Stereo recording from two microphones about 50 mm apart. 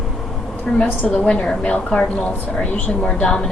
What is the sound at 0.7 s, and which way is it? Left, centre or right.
Speech, centre.